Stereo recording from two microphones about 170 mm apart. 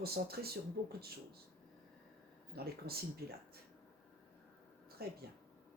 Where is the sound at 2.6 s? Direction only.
65° right (ahead or behind).